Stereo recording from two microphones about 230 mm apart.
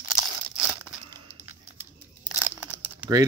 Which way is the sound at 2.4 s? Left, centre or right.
Centre.